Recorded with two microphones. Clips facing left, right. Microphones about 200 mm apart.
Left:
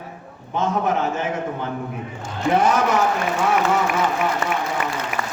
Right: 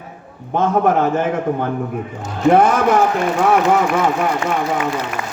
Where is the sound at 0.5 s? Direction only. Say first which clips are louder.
Right 6 dB; 55° right (ahead or behind).